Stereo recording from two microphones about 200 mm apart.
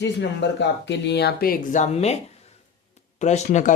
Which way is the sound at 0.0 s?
60° left (ahead or behind).